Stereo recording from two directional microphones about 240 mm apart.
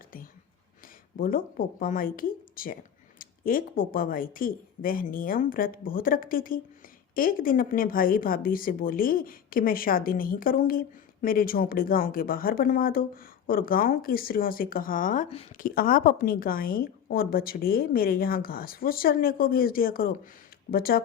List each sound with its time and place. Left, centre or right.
1.2 s speech: left